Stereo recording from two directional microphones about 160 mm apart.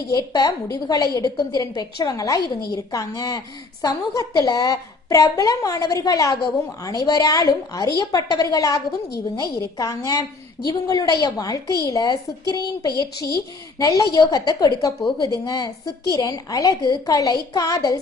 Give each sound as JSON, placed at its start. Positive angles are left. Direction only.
{"t": 0.1, "sound": "a woman's voice", "side_deg": 25}